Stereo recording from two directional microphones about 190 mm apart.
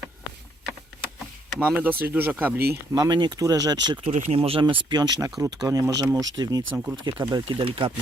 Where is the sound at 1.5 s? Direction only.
5° right (ahead or behind).